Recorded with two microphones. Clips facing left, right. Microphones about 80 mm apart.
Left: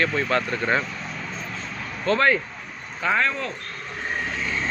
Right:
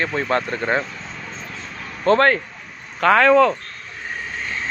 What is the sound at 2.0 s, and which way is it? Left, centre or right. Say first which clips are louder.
Speech: right 5 dB; right.